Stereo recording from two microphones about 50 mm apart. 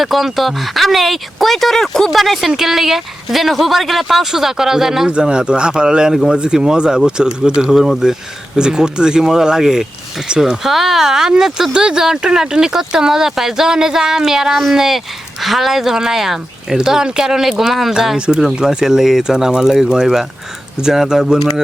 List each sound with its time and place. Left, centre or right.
0.0 s speech: centre
5.0 s speech: centre